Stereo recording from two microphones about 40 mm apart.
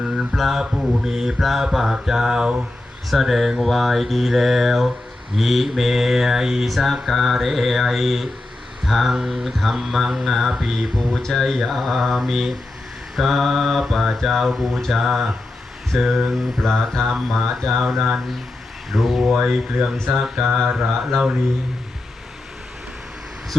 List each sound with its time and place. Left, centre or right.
0.3 s speech: centre
0.6 s mantra: centre
3.1 s speech: centre
5.4 s mantra: centre
6.7 s speech: centre
8.8 s a sound: centre
9.1 s speech: centre
19.4 s speech: right
20.1 s mantra: centre